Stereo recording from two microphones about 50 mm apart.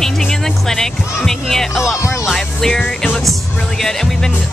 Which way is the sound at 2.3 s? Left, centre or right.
Centre.